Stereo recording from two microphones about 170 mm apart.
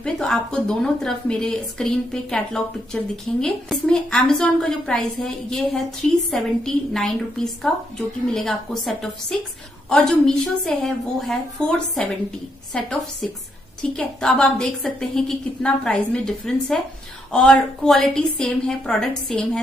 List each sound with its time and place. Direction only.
0.0 s a woman's voice: 5° left (ahead or behind)
13.9 s a woman's voice: 5° left (ahead or behind)